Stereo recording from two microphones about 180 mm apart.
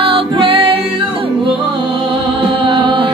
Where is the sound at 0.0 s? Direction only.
30° right (ahead or behind).